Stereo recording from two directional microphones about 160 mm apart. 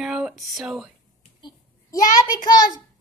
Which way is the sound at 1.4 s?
30° left (ahead or behind).